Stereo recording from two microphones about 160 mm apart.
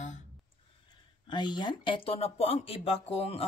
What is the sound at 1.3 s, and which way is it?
Speech, 30° left (ahead or behind).